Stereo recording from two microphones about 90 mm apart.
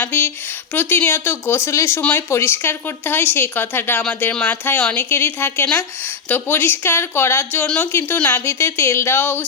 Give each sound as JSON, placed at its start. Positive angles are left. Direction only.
{"t": 0.0, "sound": "a woman's voice", "side_deg": 20}
{"t": 2.0, "sound": "speech", "side_deg": 15}
{"t": 2.3, "sound": "a woman's voice", "side_deg": 25}